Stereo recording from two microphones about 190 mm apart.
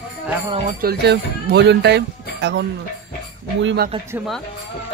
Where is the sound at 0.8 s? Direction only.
60° right (ahead or behind).